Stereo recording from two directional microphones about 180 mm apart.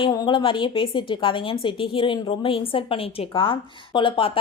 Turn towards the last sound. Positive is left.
turn(degrees=30)  # may be behind; listen again after turning